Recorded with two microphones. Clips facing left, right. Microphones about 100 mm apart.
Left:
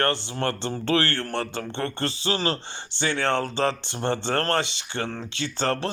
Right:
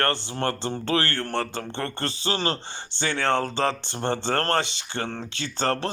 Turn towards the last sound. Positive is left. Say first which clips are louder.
# even
turn(degrees=-35)  # may be behind; listen again after turning